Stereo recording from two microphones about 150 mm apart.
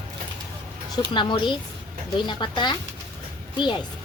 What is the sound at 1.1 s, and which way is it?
Speech, 30° left (ahead or behind).